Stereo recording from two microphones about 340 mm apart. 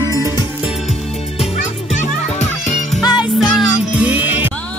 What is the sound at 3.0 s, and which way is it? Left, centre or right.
Music, centre.